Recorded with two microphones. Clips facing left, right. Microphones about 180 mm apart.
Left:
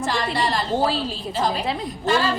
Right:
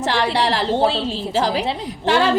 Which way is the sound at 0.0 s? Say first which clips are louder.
Right 4 dB; 70° right (ahead or behind).